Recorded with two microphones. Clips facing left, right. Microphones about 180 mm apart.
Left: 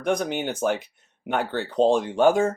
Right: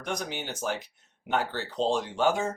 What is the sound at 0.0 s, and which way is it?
Speech, 55° left (ahead or behind).